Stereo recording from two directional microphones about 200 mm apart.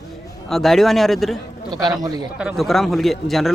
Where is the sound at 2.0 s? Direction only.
20° right (ahead or behind).